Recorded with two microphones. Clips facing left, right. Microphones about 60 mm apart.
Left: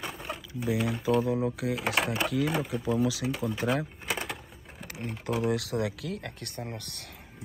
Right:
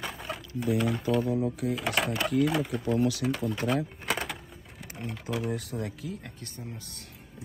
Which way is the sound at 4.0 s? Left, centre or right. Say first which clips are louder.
Right 2 dB; centre.